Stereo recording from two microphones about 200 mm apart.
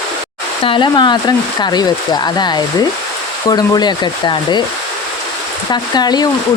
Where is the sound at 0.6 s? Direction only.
25° left (ahead or behind).